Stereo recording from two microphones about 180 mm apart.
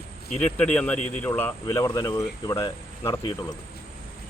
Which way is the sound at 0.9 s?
40° left (ahead or behind).